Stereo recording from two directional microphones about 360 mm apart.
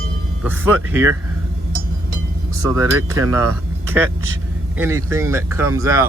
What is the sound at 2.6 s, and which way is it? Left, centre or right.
Speech, centre.